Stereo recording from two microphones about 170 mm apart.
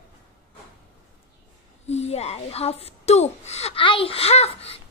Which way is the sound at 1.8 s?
40° left (ahead or behind).